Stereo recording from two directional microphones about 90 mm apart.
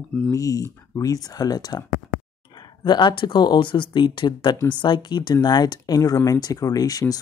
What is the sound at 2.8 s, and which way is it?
Speech, 60° left (ahead or behind).